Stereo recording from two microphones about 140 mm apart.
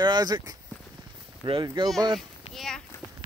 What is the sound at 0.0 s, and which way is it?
Speech, 30° right (ahead or behind).